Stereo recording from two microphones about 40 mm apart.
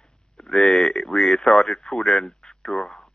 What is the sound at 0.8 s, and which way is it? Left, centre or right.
Speech, left.